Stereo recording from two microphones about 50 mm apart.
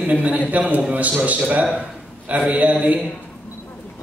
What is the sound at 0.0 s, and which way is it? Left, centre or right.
A man's voice, right.